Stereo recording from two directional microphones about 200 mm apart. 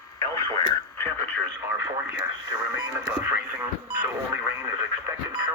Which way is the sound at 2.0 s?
15° right (ahead or behind).